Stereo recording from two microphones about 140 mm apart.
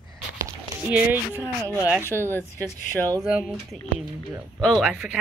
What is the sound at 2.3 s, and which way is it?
Speech, 15° left (ahead or behind).